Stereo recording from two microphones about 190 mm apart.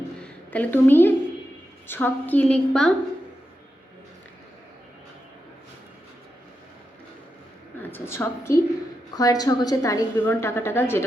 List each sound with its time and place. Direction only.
0.2 s a sound: 10° left (ahead or behind)
1.9 s a woman's voice: 10° left (ahead or behind)
7.8 s a woman's voice: 10° left (ahead or behind)